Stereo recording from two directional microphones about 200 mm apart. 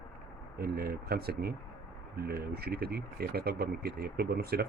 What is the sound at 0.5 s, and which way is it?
Speech, 50° right (ahead or behind).